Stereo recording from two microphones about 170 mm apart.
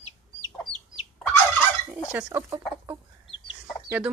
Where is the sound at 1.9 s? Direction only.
10° right (ahead or behind).